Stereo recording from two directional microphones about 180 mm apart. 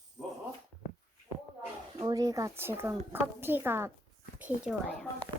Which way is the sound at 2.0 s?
20° right (ahead or behind).